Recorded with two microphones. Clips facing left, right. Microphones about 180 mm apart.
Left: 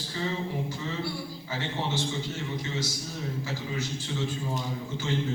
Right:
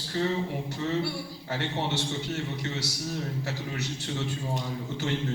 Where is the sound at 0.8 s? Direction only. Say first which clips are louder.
Right 4 dB; 65° right (ahead or behind).